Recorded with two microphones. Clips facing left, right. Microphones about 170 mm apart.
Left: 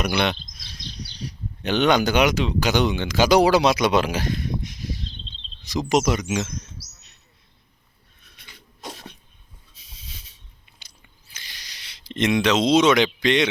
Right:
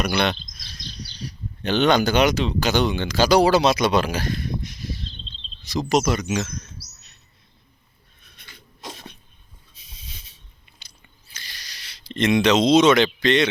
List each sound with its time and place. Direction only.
0.0 s speech: 15° left (ahead or behind)
1.6 s speech: 15° left (ahead or behind)
8.9 s cough: 5° left (ahead or behind)
11.3 s a sound: 15° left (ahead or behind)
12.3 s speech: 5° left (ahead or behind)